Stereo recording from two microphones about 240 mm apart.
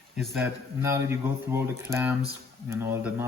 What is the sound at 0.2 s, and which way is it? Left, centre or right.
Speech, centre.